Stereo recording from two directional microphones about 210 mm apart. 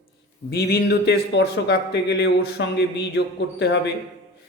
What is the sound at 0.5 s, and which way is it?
Speech, 50° left (ahead or behind).